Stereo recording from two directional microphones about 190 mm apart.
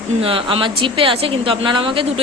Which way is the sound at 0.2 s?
30° right (ahead or behind).